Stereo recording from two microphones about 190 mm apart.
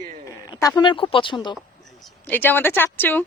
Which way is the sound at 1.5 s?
Centre (ahead or behind).